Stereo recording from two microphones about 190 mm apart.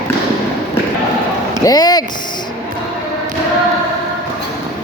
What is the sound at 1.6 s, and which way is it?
Speech, 20° left (ahead or behind).